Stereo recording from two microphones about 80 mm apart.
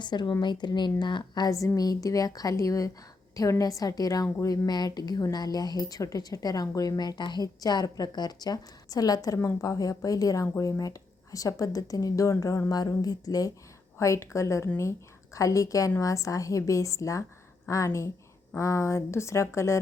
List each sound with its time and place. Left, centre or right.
0.0 s a woman's voice: left
1.5 s a woman's voice: left
14.0 s a woman's voice: left